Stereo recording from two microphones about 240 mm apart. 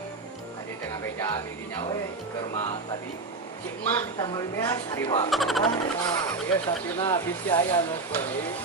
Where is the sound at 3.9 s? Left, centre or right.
Centre.